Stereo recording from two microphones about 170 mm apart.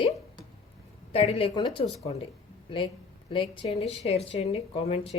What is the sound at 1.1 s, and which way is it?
Speech, 35° left (ahead or behind).